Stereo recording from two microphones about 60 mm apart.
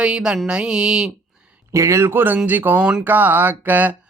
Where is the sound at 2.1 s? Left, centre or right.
Right.